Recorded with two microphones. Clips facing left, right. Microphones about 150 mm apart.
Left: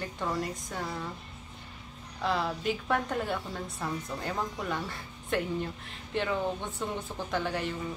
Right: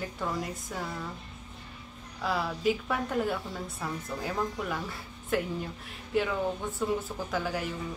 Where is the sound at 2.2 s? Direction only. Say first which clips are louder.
Right 1 dB; 5° right (ahead or behind).